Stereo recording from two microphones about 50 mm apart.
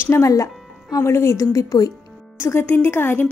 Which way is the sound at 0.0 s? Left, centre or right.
Left.